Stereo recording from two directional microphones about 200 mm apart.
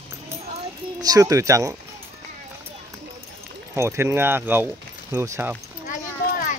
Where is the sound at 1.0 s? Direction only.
15° right (ahead or behind).